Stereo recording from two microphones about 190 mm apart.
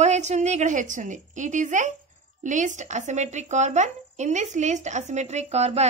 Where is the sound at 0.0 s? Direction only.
35° right (ahead or behind).